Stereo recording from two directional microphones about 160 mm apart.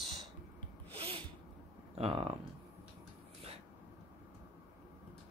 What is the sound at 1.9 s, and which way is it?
Speech, 35° right (ahead or behind).